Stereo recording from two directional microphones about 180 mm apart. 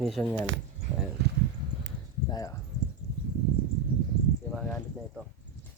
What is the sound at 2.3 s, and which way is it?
Speech, 20° left (ahead or behind).